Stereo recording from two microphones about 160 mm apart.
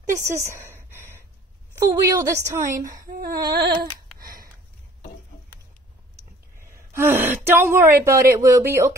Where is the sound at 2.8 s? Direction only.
55° right (ahead or behind).